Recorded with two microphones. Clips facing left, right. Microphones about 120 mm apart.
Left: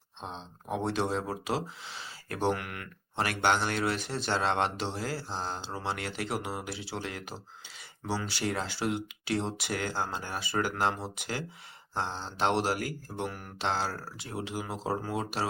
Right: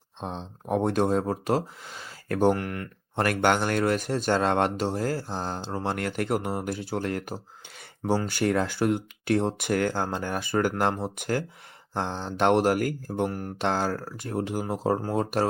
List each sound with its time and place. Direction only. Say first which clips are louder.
0.2 s speech: right 6 dB; 55° right (ahead or behind)